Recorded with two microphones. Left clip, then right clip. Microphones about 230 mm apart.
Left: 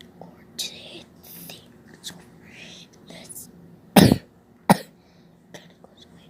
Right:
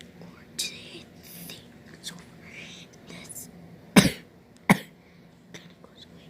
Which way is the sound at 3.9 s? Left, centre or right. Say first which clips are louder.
Left 5 dB; centre.